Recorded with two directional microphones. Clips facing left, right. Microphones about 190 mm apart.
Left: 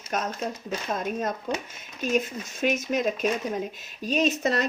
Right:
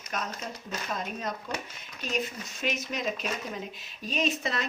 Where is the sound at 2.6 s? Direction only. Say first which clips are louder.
Left 7 dB; 50° left (ahead or behind).